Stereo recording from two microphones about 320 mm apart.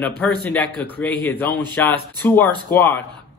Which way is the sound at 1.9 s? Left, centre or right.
Centre.